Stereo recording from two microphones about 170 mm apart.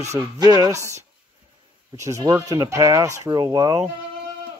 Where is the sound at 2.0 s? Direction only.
20° right (ahead or behind).